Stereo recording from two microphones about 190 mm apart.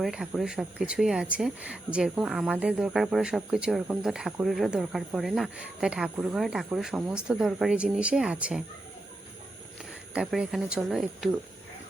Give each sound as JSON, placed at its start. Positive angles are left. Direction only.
{"t": 0.0, "sound": "speech", "side_deg": 0}
{"t": 10.2, "sound": "speech", "side_deg": -5}